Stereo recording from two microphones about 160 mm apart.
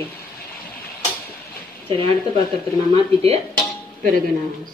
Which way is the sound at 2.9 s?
40° right (ahead or behind).